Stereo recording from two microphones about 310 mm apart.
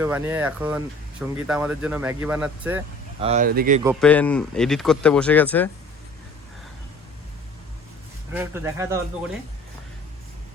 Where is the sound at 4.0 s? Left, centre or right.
Centre.